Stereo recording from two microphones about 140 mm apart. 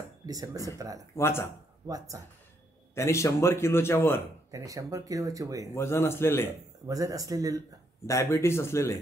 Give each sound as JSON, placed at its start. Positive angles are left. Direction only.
{"t": 0.3, "sound": "speech", "side_deg": -25}
{"t": 1.1, "sound": "a man's voice", "side_deg": 20}
{"t": 1.9, "sound": "speech", "side_deg": -25}
{"t": 2.9, "sound": "a man's voice", "side_deg": 20}
{"t": 4.5, "sound": "speech", "side_deg": -25}
{"t": 5.8, "sound": "a man's voice", "side_deg": 15}
{"t": 6.9, "sound": "speech", "side_deg": -25}
{"t": 8.1, "sound": "a man's voice", "side_deg": 20}